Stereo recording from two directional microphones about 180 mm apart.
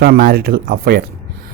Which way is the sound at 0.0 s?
60° right (ahead or behind).